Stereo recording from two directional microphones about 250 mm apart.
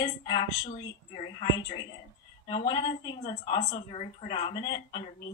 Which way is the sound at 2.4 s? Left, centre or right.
Centre.